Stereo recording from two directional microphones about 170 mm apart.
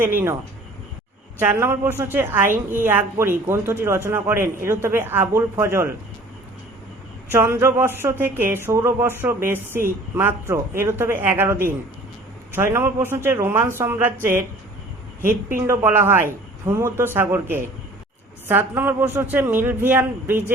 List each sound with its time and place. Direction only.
0.0 s a woman's voice: 10° right (ahead or behind)
1.4 s a woman's voice: 10° right (ahead or behind)
7.3 s a woman's voice: 15° right (ahead or behind)
12.7 s a woman's voice: 15° right (ahead or behind)
15.3 s a woman's voice: 55° right (ahead or behind)
15.6 s a woman's voice: 15° right (ahead or behind)